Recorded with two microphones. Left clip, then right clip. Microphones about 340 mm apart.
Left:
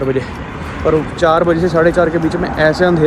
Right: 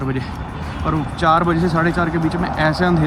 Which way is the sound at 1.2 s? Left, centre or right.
Centre.